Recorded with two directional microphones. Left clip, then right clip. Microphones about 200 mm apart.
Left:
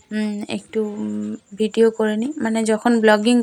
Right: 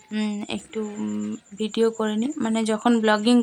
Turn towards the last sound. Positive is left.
turn(degrees=15)  # may be behind; listen again after turning